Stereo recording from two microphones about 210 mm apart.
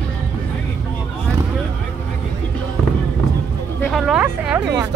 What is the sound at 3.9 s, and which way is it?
Speech, centre (ahead or behind).